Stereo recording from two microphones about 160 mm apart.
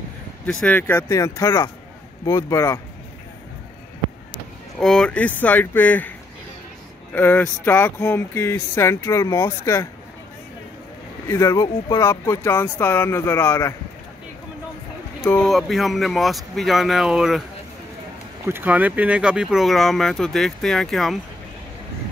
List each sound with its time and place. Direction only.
0.5 s speech: 5° left (ahead or behind)
4.7 s speech: 5° left (ahead or behind); by 9.8 s 20° left (ahead or behind)
11.2 s speech: 20° left (ahead or behind)
15.2 s speech: 5° left (ahead or behind)
18.5 s speech: 10° right (ahead or behind)